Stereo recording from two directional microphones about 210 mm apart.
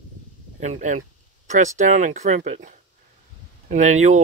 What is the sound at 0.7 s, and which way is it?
Speech, 35° right (ahead or behind).